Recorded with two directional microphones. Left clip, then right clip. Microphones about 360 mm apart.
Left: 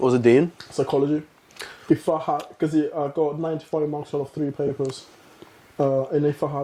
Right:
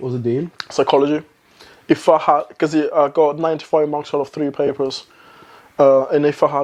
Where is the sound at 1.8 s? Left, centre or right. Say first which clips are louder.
Right 9 dB; centre.